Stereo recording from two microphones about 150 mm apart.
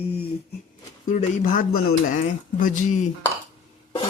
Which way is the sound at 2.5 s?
60° left (ahead or behind).